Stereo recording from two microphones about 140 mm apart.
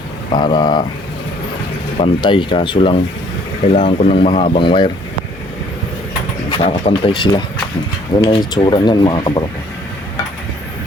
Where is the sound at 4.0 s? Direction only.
45° left (ahead or behind).